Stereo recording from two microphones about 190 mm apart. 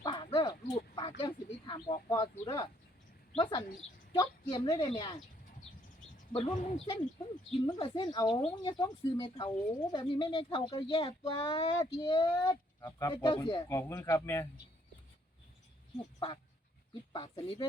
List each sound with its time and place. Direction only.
0.0 s a sound: 25° left (ahead or behind)
2.4 s speech: 20° left (ahead or behind)
6.3 s speech: 30° left (ahead or behind)
13.7 s speech: 15° left (ahead or behind)
17.1 s speech: 25° left (ahead or behind)